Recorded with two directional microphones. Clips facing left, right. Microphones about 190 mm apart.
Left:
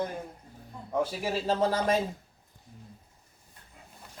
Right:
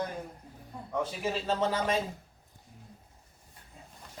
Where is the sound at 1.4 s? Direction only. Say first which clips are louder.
Left 4 dB; 35° left (ahead or behind).